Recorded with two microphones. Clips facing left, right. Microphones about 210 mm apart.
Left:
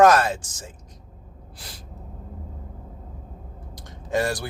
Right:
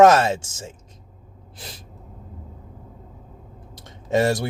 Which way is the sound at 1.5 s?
20° right (ahead or behind).